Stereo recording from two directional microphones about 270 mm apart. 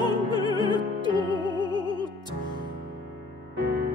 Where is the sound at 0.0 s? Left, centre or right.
Centre.